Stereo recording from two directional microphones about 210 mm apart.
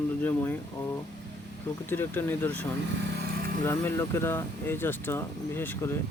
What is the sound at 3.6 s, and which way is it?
Speech, 10° left (ahead or behind).